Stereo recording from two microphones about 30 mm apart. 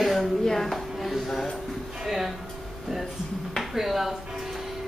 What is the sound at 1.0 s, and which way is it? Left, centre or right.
Speech, centre.